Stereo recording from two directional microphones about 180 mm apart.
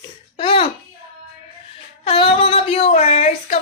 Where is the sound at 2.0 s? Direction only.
30° left (ahead or behind).